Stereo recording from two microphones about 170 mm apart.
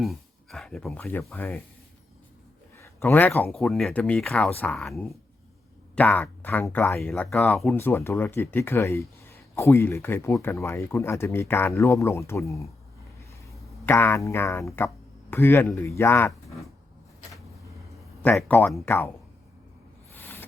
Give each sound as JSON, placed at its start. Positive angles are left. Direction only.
{"t": 0.0, "sound": "speech", "side_deg": 0}
{"t": 2.7, "sound": "speech", "side_deg": 15}
{"t": 7.1, "sound": "speech", "side_deg": 5}
{"t": 13.8, "sound": "speech", "side_deg": 15}
{"t": 18.2, "sound": "speech", "side_deg": 10}
{"t": 20.1, "sound": "a sound", "side_deg": 10}